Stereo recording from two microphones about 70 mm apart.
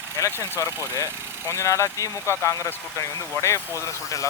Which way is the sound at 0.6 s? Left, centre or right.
Left.